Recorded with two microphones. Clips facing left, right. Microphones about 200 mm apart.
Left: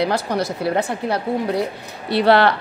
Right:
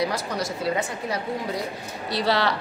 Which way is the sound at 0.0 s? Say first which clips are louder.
Left 6 dB; 65° left (ahead or behind).